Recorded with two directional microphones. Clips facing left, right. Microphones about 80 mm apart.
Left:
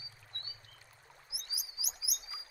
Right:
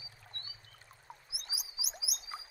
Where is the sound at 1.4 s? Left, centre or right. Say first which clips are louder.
Right 1 dB; right.